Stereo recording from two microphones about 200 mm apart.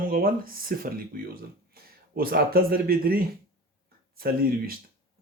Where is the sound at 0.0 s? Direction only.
45° right (ahead or behind).